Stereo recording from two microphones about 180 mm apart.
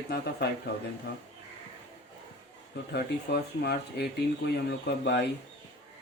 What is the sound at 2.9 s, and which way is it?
Speech, 65° left (ahead or behind).